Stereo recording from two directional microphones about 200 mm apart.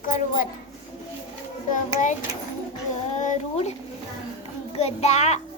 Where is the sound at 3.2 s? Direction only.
35° left (ahead or behind).